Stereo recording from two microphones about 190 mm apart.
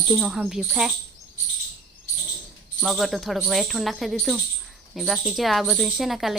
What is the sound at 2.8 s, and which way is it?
Speech, centre (ahead or behind).